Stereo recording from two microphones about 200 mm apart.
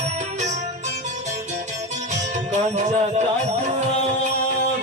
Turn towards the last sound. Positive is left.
turn(degrees=-35)  # may be behind; listen again after turning